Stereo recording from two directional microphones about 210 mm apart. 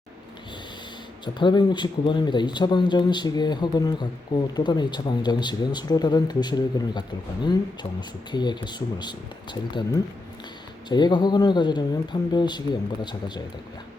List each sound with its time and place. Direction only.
1.2 s speech: 20° left (ahead or behind)
8.3 s speech: 20° left (ahead or behind)